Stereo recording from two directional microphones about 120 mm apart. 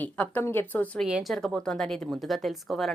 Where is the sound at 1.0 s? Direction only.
Centre (ahead or behind).